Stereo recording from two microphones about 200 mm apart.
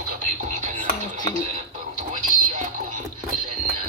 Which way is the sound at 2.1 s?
40° right (ahead or behind).